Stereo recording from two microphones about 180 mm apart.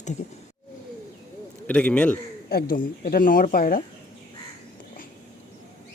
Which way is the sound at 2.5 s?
55° left (ahead or behind).